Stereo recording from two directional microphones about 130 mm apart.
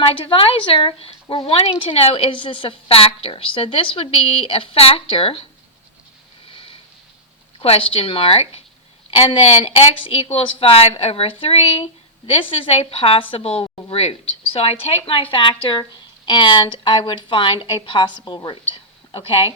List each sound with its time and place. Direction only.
0.0 s a woman's voice: 45° left (ahead or behind)
6.5 s a sound: 45° left (ahead or behind)
7.6 s a woman's voice: 45° left (ahead or behind)